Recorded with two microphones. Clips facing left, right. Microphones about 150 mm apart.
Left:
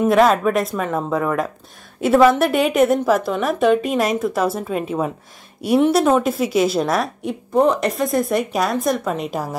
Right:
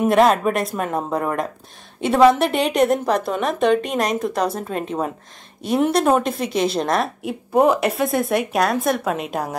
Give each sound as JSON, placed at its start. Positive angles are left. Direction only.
{"t": 0.1, "sound": "a woman's voice", "side_deg": 0}